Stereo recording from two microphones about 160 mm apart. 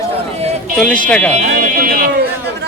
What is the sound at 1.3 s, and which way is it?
Speech, 60° right (ahead or behind).